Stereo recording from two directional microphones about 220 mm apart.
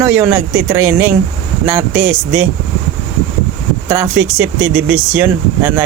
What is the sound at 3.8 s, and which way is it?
Speech, 15° right (ahead or behind).